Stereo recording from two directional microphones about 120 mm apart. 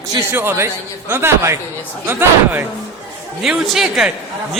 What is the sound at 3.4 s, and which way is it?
Speech, centre (ahead or behind).